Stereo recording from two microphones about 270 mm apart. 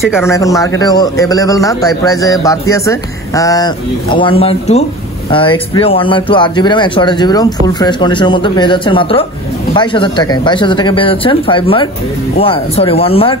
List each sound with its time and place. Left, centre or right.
0.2 s speech: centre